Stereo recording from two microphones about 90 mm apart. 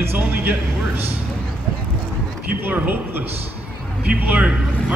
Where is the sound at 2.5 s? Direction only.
20° right (ahead or behind).